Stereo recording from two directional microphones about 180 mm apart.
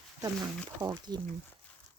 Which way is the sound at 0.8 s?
20° right (ahead or behind).